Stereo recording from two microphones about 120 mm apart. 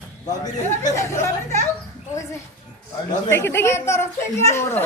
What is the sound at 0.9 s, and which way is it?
Speech, 25° left (ahead or behind).